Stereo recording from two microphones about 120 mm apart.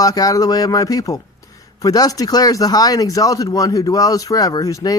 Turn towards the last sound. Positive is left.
turn(degrees=30)  # may be behind; listen again after turning